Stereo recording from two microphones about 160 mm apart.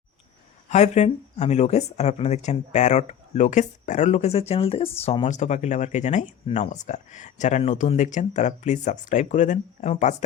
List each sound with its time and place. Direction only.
0.7 s speech: 45° left (ahead or behind)